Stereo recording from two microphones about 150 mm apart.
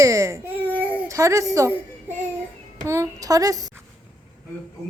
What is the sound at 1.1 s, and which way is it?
Speech, 20° right (ahead or behind).